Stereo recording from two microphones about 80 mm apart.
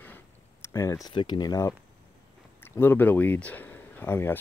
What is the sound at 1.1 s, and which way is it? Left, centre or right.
Speech, left.